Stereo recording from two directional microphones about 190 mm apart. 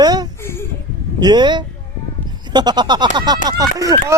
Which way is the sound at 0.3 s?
15° left (ahead or behind).